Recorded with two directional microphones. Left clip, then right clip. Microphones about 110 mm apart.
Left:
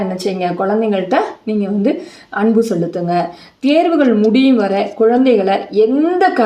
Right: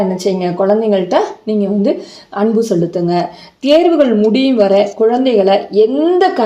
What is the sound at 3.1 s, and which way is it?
A woman's voice, 35° right (ahead or behind).